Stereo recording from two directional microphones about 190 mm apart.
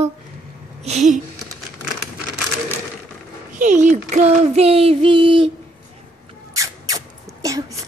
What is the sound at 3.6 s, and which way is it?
Child singing, 40° right (ahead or behind).